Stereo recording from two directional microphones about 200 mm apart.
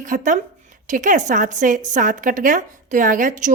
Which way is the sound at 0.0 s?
40° right (ahead or behind).